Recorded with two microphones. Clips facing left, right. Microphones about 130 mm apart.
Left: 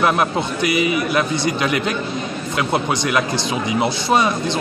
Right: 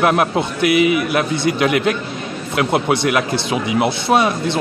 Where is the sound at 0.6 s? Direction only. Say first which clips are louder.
Right 5 dB; 65° right (ahead or behind).